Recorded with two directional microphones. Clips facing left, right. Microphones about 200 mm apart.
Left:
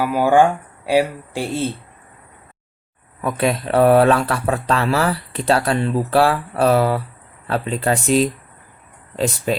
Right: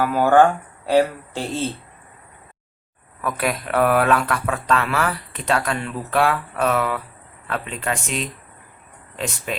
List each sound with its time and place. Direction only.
0.0 s speech: 10° left (ahead or behind)
3.2 s speech: 25° left (ahead or behind)